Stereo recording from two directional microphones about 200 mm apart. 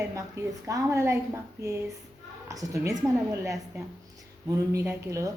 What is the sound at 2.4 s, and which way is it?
Speech, 15° right (ahead or behind).